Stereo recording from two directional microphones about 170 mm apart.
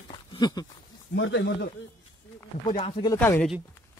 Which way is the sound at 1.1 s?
90° left.